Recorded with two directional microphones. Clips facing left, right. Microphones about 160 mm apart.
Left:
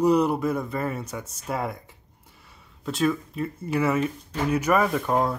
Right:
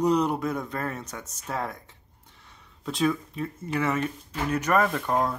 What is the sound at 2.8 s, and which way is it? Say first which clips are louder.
Speech: left 1 dB; centre (ahead or behind).